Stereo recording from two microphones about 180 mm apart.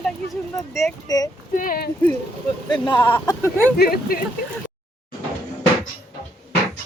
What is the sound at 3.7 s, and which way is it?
Speech, 60° left (ahead or behind).